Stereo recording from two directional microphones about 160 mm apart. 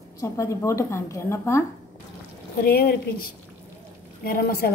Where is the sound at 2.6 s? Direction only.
70° left (ahead or behind).